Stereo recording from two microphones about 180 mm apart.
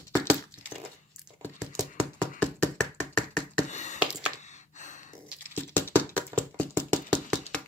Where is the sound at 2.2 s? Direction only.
10° left (ahead or behind).